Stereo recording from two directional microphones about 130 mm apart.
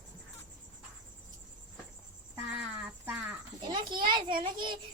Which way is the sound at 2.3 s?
15° right (ahead or behind).